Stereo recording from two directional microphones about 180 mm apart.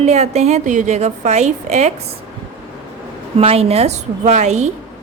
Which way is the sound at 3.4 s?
35° right (ahead or behind).